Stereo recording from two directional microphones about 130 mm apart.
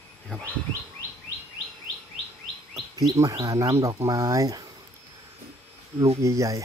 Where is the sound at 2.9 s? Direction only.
30° right (ahead or behind).